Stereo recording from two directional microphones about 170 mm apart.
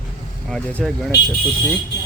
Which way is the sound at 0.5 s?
5° left (ahead or behind).